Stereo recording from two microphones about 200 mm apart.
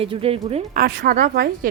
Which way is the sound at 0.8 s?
50° right (ahead or behind).